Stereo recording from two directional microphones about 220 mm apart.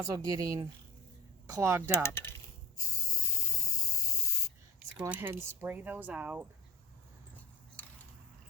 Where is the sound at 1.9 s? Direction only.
10° left (ahead or behind).